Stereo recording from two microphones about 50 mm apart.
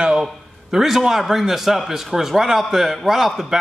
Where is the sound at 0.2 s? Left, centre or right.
Centre.